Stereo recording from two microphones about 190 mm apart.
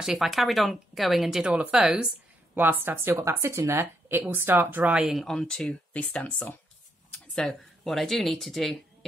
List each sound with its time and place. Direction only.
0.0 s speech: centre (ahead or behind)